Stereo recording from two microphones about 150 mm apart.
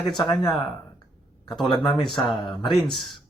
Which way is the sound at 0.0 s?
Centre (ahead or behind).